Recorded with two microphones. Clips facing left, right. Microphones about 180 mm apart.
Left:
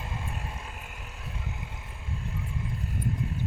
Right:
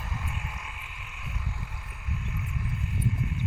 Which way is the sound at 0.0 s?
25° left (ahead or behind).